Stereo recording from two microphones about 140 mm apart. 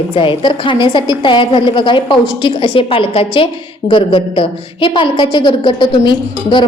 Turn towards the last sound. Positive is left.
turn(degrees=35)  # may be behind; listen again after turning